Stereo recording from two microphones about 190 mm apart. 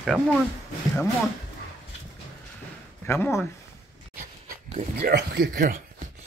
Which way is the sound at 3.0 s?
10° left (ahead or behind).